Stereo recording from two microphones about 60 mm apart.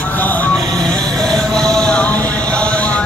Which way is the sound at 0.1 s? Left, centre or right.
Left.